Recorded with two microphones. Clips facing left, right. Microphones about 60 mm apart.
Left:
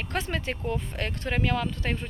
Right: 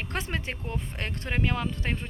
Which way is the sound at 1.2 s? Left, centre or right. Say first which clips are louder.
Left 2 dB; centre.